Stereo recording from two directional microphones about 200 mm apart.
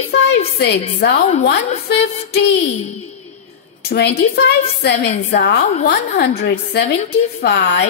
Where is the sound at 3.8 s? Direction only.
55° left (ahead or behind).